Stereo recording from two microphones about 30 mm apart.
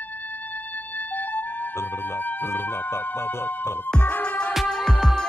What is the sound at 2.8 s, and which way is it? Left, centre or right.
Music, left.